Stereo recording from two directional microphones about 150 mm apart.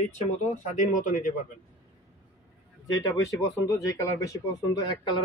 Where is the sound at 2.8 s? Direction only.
20° left (ahead or behind).